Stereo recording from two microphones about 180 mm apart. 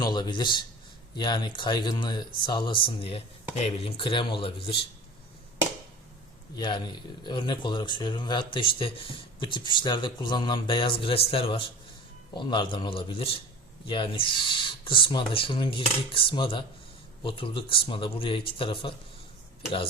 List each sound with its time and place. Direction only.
0.0 s a man's voice: 25° left (ahead or behind)
6.6 s speech: 25° left (ahead or behind)